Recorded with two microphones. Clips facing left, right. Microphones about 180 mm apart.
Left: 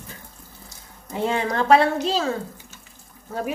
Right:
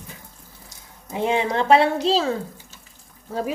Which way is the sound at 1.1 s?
20° right (ahead or behind).